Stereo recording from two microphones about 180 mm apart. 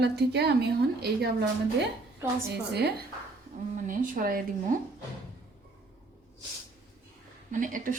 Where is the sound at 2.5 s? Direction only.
65° right (ahead or behind).